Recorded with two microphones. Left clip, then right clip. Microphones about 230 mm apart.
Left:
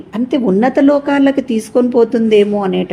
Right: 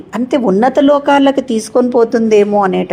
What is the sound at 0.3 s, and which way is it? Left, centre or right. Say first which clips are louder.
Speech: right 2 dB; right.